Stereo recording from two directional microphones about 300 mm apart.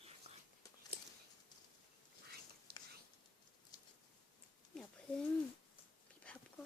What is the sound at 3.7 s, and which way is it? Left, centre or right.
Patter, centre.